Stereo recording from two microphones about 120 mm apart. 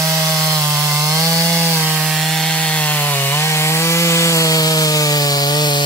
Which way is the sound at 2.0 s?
Centre (ahead or behind).